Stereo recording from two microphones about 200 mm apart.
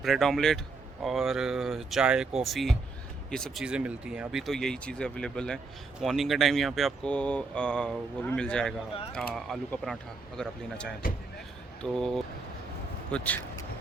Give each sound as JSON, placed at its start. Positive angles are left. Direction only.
{"t": 0.0, "sound": "speech", "side_deg": 0}